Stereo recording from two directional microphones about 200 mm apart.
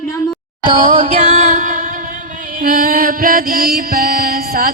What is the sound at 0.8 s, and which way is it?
Music, 35° right (ahead or behind).